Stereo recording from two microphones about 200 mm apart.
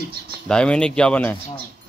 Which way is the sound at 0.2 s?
55° right (ahead or behind).